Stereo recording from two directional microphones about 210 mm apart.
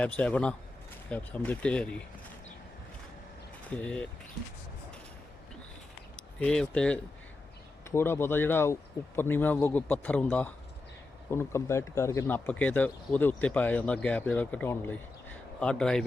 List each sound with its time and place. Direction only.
0.0 s speech: 5° left (ahead or behind)
3.7 s speech: 5° left (ahead or behind)
6.1 s speech: 5° left (ahead or behind)